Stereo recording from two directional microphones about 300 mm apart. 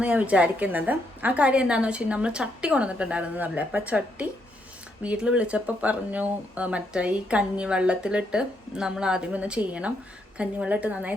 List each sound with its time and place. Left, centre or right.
0.0 s speech: centre